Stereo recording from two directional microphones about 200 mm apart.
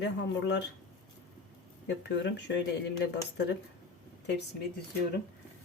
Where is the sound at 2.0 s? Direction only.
60° left (ahead or behind).